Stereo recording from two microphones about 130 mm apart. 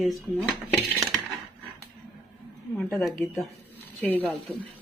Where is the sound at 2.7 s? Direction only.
5° left (ahead or behind).